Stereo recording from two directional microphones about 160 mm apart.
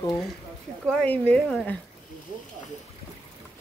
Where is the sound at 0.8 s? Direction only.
5° left (ahead or behind).